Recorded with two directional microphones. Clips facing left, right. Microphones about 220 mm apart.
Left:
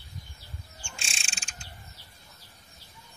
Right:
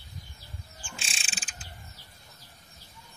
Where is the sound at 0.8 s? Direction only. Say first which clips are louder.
Right 2 dB; centre (ahead or behind).